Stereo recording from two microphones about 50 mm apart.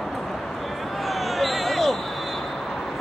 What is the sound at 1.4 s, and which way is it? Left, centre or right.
Basketball bounce, centre.